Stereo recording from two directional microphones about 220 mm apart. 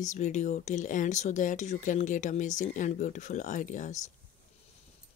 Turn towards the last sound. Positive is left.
turn(degrees=35)  # may be behind; listen again after turning